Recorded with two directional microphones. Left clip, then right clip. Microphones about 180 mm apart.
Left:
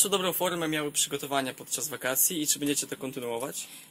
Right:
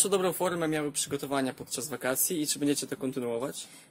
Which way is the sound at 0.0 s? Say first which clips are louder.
Even; 50° right (ahead or behind).